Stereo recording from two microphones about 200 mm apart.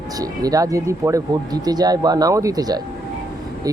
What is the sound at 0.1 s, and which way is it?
Speech, 20° right (ahead or behind).